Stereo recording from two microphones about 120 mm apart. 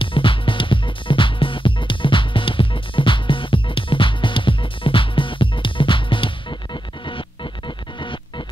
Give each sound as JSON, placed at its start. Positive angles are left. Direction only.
{"t": 0.0, "sound": "music", "side_deg": 45}